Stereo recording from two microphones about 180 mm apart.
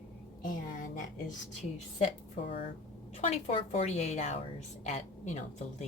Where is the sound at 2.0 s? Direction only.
30° left (ahead or behind).